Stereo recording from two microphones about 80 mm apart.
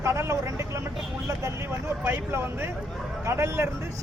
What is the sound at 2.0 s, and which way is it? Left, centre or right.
Speech, right.